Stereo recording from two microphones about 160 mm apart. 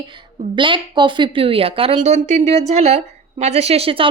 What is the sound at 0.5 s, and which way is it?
A woman's voice, 30° right (ahead or behind).